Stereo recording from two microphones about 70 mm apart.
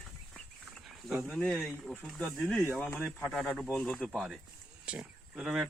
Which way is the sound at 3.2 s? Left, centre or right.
Centre.